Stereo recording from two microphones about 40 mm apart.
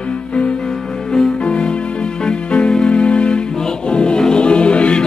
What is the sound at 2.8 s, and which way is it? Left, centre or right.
Music, left.